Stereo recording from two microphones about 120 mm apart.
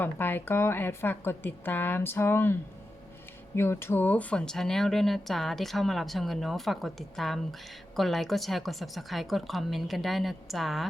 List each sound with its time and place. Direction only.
0.0 s a woman's voice: 15° left (ahead or behind); by 10.8 s centre (ahead or behind)